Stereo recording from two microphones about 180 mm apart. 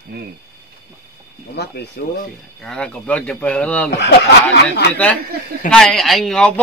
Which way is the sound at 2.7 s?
5° left (ahead or behind).